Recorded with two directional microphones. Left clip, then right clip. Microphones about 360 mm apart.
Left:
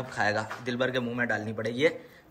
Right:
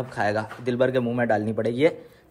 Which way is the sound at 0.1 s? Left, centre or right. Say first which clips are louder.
Right 2 dB; centre.